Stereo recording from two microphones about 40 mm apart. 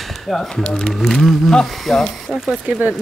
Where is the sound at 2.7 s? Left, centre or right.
Right.